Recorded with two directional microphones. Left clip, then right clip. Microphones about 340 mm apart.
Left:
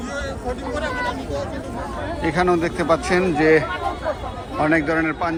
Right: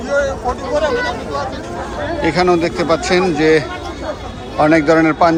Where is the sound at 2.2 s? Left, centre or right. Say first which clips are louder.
Right 5 dB; centre.